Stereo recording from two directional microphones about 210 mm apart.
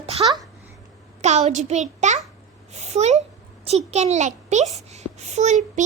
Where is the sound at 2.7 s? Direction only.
30° right (ahead or behind).